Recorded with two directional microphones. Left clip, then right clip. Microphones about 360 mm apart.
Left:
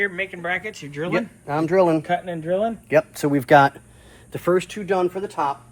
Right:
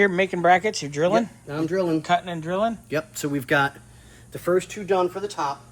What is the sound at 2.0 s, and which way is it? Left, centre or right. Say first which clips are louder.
Speech: right 1 dB; centre.